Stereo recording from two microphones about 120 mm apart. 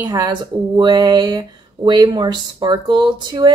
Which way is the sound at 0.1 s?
40° right (ahead or behind).